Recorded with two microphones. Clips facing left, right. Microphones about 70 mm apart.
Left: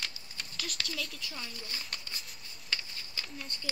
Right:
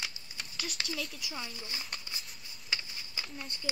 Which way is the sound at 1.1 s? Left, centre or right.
Centre.